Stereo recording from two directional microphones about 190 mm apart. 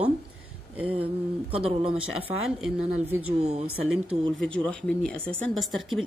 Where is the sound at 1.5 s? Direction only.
30° right (ahead or behind).